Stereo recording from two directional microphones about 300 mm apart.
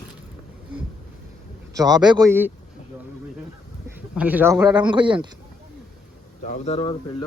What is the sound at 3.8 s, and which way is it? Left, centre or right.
Speech, centre.